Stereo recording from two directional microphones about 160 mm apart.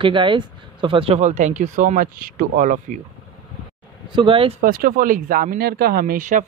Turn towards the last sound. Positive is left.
turn(degrees=-55)  # may be behind; listen again after turning